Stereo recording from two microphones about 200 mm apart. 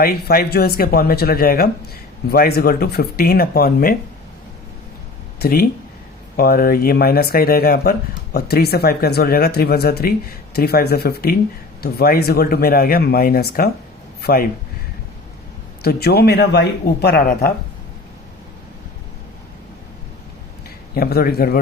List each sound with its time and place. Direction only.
0.0 s speech: 50° left (ahead or behind)
5.4 s speech: 50° left (ahead or behind)
15.8 s speech: 50° left (ahead or behind)
20.7 s a man's voice: 50° left (ahead or behind)